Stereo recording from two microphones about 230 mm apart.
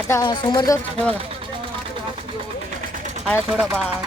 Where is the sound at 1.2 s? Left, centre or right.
Right.